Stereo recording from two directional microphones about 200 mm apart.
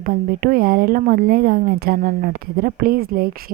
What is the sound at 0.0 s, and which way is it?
Speech, 50° right (ahead or behind).